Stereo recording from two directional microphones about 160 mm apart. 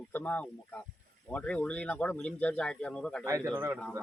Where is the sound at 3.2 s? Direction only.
15° right (ahead or behind).